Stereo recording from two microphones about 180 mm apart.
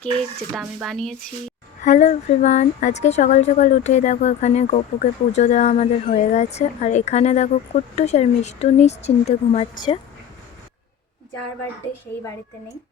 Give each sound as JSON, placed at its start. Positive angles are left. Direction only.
{"t": 0.5, "sound": "speech", "side_deg": 0}
{"t": 1.8, "sound": "a woman's voice", "side_deg": 40}